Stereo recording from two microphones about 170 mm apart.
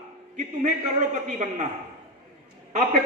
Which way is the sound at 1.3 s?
45° right (ahead or behind).